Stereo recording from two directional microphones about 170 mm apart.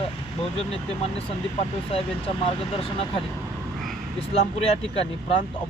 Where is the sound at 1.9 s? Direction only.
30° left (ahead or behind).